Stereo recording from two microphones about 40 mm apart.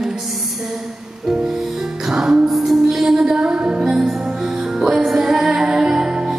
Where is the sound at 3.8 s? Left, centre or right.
Centre.